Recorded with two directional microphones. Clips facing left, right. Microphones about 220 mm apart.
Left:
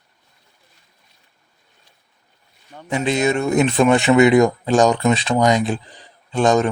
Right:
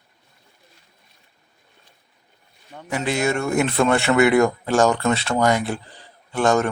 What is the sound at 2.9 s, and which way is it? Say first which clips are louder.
Speech: left 3 dB; 20° left (ahead or behind).